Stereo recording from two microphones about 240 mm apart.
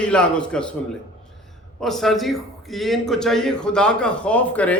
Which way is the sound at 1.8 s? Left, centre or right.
Centre.